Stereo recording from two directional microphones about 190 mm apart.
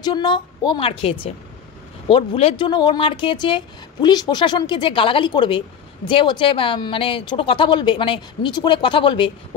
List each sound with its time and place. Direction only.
0.0 s a woman's voice: 20° left (ahead or behind)